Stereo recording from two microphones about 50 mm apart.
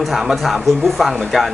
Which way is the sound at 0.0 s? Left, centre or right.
Centre.